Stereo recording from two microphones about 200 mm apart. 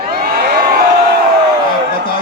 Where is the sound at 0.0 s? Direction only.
50° right (ahead or behind).